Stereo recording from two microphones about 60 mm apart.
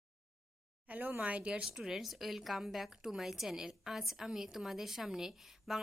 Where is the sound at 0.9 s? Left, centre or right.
Right.